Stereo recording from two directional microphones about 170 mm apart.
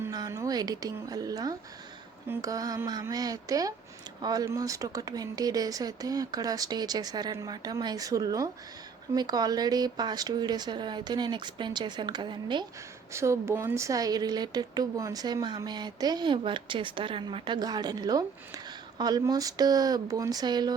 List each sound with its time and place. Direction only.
0.0 s a woman's voice: 20° right (ahead or behind)
13.1 s a woman's voice: 15° right (ahead or behind)